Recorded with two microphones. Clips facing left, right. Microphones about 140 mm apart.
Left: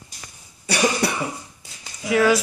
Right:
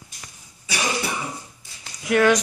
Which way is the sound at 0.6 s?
65° left (ahead or behind).